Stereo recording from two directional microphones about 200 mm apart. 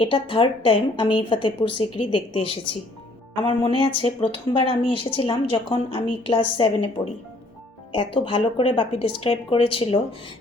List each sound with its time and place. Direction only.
0.0 s speech: 25° left (ahead or behind)